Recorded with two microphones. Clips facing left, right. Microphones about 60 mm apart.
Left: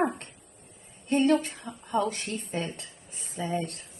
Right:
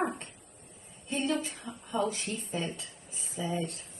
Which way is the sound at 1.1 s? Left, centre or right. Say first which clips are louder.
Left 8 dB; left.